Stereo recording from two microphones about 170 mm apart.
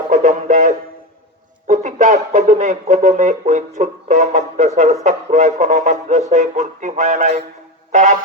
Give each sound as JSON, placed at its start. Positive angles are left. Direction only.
{"t": 0.1, "sound": "music", "side_deg": -45}
{"t": 1.6, "sound": "speech", "side_deg": -45}